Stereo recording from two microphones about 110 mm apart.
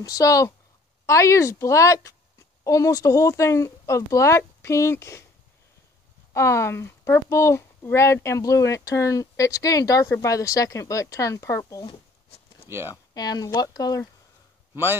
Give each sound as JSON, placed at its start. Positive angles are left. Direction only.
{"t": 0.0, "sound": "a woman's voice", "side_deg": 30}
{"t": 6.3, "sound": "speech", "side_deg": 25}
{"t": 12.6, "sound": "speech", "side_deg": -20}
{"t": 12.9, "sound": "speech", "side_deg": 35}